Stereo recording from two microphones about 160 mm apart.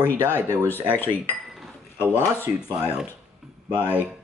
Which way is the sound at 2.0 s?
15° left (ahead or behind).